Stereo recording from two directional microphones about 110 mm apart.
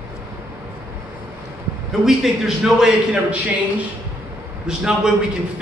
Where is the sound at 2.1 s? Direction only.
5° right (ahead or behind).